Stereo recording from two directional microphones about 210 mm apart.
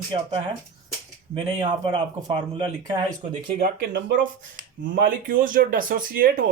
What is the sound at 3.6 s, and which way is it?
Speech, 55° right (ahead or behind).